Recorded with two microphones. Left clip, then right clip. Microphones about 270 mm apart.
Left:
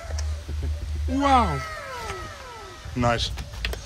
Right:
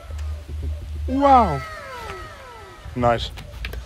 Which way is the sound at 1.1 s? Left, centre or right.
Centre.